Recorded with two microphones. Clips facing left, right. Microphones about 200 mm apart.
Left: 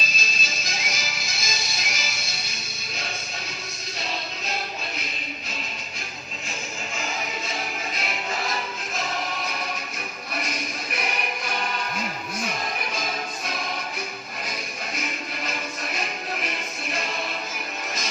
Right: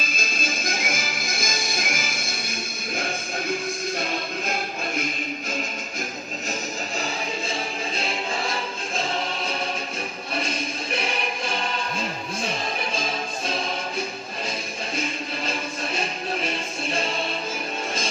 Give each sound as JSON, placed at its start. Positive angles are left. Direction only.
{"t": 0.0, "sound": "music", "side_deg": -50}
{"t": 7.9, "sound": "music", "side_deg": -30}
{"t": 10.3, "sound": "music", "side_deg": -30}
{"t": 14.9, "sound": "music", "side_deg": -30}